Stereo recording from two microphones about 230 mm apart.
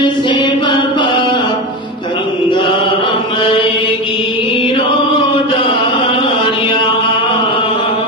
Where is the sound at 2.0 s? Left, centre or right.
Left.